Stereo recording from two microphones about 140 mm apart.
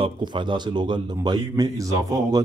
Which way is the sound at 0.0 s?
35° right (ahead or behind).